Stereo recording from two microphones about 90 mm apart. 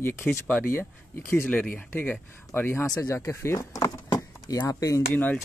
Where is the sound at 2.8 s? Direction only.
40° left (ahead or behind).